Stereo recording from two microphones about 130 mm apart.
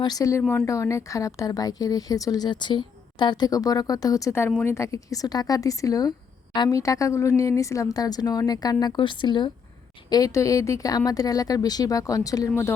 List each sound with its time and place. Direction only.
0.0 s speech: 30° left (ahead or behind)